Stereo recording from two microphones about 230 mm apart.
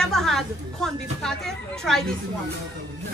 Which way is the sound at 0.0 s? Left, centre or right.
Centre.